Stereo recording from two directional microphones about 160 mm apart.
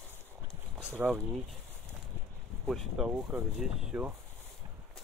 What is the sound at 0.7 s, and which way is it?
Speech, 10° right (ahead or behind).